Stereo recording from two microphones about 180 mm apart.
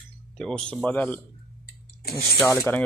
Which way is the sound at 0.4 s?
5° left (ahead or behind).